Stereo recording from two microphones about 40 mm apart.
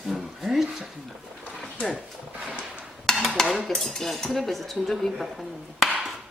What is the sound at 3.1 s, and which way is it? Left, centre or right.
Dishes, centre.